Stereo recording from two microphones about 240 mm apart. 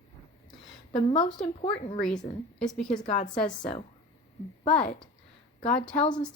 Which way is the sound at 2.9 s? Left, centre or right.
Left.